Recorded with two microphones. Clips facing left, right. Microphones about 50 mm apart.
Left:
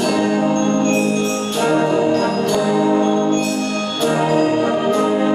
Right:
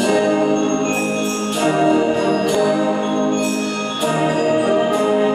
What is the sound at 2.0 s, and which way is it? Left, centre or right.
Music, centre.